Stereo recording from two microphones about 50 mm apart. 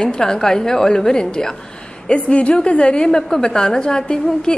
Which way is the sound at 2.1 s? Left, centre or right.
Left.